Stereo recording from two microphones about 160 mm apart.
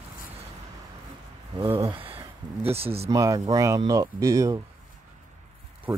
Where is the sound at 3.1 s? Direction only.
20° right (ahead or behind).